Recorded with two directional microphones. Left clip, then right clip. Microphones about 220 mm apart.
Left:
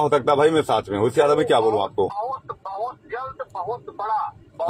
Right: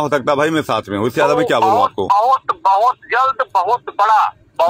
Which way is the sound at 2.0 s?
45° right (ahead or behind).